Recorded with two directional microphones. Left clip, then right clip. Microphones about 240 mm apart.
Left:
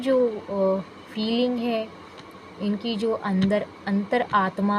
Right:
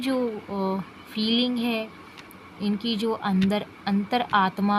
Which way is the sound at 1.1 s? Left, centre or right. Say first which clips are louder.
Even; right.